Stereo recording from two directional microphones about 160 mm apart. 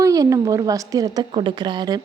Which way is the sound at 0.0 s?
20° right (ahead or behind).